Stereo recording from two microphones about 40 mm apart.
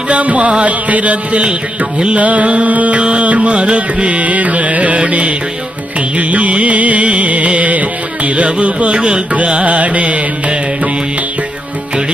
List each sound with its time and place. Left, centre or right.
0.1 s music: right
3.0 s music: right
8.9 s music: right